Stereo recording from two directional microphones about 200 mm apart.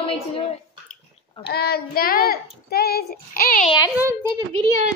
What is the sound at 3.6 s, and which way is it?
Speech, 20° left (ahead or behind).